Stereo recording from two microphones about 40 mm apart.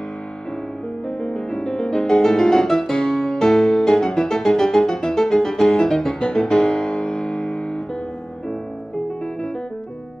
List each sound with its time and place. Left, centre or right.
1.2 s music: centre